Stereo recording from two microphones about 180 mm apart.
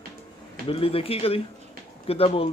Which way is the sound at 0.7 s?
30° left (ahead or behind).